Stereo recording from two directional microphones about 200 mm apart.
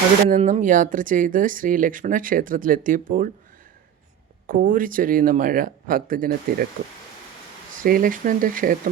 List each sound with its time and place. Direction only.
0.3 s speech: 40° right (ahead or behind)
4.4 s speech: 45° right (ahead or behind)
7.8 s speech: 45° right (ahead or behind)